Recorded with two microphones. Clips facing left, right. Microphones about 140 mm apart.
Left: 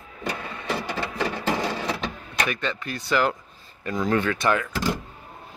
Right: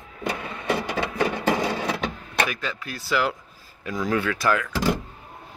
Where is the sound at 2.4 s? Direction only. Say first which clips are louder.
Left 2 dB; 5° right (ahead or behind).